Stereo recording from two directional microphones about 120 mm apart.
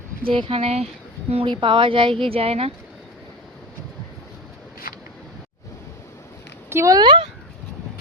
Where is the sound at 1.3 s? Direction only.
45° right (ahead or behind).